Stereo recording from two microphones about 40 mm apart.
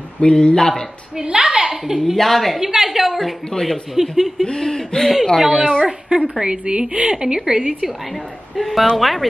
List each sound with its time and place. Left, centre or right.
0.2 s speech: left
1.1 s a woman's voice: centre
2.1 s a woman's voice: centre
2.6 s a woman's voice: centre
3.5 s speech: left
4.0 s a woman's voice: centre
4.5 s speech: centre
6.0 s a woman's voice: right
8.1 s a woman's voice: centre